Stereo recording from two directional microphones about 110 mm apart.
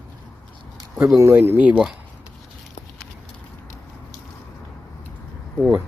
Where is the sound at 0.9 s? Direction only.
25° right (ahead or behind).